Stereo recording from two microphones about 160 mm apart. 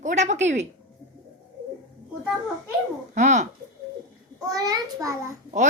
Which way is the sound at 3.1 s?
50° right (ahead or behind).